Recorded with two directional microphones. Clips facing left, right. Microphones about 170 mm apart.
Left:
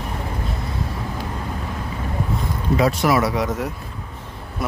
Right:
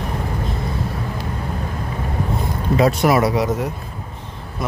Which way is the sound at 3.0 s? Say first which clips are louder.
Right 3 dB; 20° right (ahead or behind).